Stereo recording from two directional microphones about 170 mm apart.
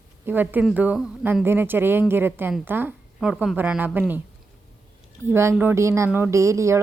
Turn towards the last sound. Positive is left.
turn(degrees=-15)  # may be behind; listen again after turning